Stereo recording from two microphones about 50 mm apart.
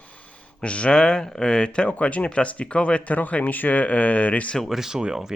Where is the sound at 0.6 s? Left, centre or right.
Left.